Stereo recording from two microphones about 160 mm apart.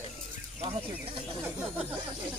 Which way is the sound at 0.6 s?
40° right (ahead or behind).